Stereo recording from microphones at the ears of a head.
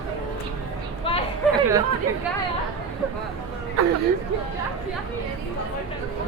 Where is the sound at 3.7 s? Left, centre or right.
Right.